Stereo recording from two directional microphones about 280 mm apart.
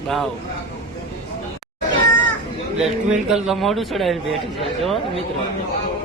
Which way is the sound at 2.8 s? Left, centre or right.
Centre.